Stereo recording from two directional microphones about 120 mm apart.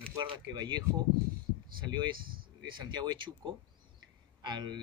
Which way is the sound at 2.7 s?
35° right (ahead or behind).